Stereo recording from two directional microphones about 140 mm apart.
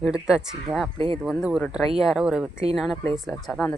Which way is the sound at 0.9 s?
40° right (ahead or behind).